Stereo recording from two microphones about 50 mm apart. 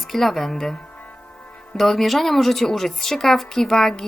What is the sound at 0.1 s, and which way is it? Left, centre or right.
A woman's voice, centre.